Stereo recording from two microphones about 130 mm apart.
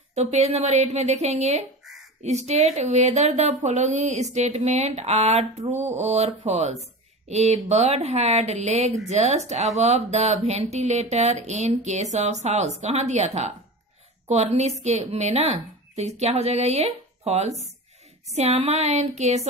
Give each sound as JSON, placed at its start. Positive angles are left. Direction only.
{"t": 0.1, "sound": "speech", "side_deg": -60}